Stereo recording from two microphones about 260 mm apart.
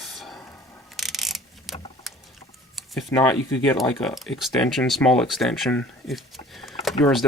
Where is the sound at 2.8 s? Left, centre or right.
Centre.